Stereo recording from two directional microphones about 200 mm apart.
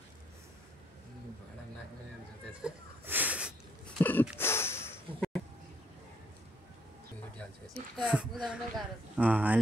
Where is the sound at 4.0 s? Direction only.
10° left (ahead or behind).